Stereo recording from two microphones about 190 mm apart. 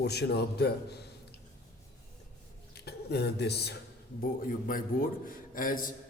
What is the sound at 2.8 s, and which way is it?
Speech, 60° left (ahead or behind).